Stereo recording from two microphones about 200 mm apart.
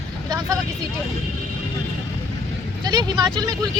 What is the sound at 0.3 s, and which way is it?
Vehicle, 20° right (ahead or behind).